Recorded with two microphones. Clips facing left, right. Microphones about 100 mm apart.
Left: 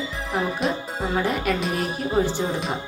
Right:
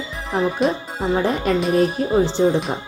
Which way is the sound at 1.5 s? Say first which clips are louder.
Right 5 dB; 30° right (ahead or behind).